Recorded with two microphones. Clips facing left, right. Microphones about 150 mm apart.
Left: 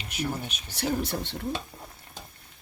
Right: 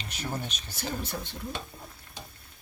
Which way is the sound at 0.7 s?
75° left (ahead or behind).